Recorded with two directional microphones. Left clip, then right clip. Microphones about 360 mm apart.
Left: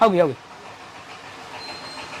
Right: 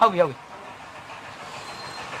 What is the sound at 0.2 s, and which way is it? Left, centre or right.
Speech, left.